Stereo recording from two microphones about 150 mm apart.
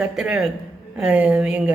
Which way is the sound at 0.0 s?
5° right (ahead or behind).